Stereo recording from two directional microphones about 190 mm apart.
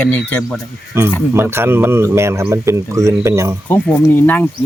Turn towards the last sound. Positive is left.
turn(degrees=10)  # may be behind; listen again after turning